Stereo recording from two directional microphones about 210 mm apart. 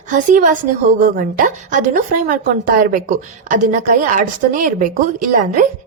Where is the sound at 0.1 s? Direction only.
40° right (ahead or behind).